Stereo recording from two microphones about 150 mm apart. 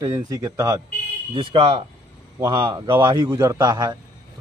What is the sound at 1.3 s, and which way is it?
A man's voice, 40° right (ahead or behind).